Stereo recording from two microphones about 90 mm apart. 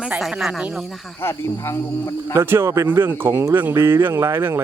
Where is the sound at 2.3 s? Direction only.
25° right (ahead or behind).